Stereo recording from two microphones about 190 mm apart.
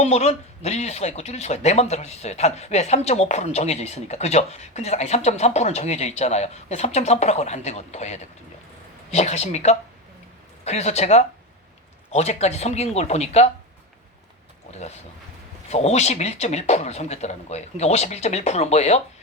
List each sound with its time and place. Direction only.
0.0 s speech: 35° left (ahead or behind)
14.7 s speech: 35° left (ahead or behind)